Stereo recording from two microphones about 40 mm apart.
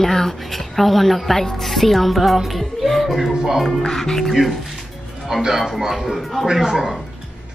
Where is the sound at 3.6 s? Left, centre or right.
Centre.